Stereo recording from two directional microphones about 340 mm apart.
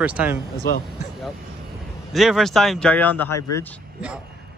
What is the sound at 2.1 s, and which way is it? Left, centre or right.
Speech, centre.